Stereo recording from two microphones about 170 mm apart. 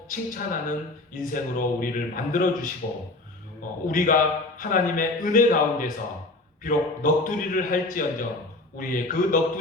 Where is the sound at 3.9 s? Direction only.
50° left (ahead or behind).